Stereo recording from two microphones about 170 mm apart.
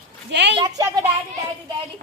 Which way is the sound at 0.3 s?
90° right.